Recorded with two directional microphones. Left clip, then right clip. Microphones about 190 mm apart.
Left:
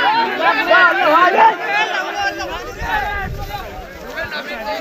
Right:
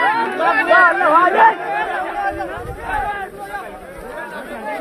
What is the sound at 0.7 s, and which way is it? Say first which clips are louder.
Chatter: even; 25° left (ahead or behind).